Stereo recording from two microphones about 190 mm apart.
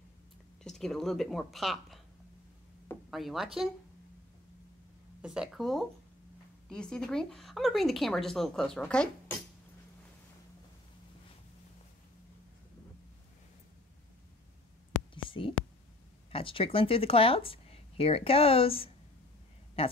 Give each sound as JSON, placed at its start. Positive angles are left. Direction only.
{"t": 0.7, "sound": "speech", "side_deg": 0}
{"t": 3.1, "sound": "speech", "side_deg": 0}
{"t": 5.2, "sound": "speech", "side_deg": -5}
{"t": 15.2, "sound": "whispering", "side_deg": 25}
{"t": 16.3, "sound": "speech", "side_deg": 30}